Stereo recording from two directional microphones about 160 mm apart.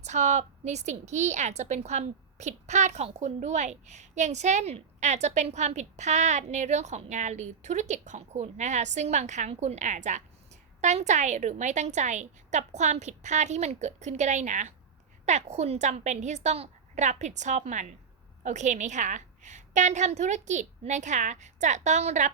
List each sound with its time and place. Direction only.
0.0 s a woman's voice: 45° right (ahead or behind)